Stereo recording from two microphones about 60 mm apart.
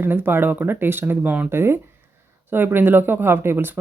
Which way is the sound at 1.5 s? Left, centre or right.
Right.